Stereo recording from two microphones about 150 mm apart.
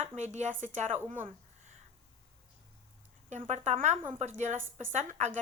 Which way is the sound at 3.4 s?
45° right (ahead or behind).